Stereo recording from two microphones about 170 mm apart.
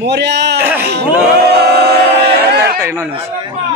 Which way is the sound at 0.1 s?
90° right.